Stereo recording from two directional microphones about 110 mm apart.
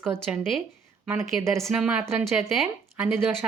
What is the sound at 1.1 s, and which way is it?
Speech, 30° right (ahead or behind).